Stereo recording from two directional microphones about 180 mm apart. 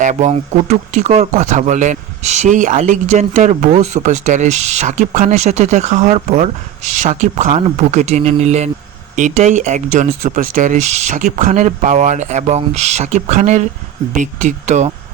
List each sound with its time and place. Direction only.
0.0 s speech: 40° right (ahead or behind)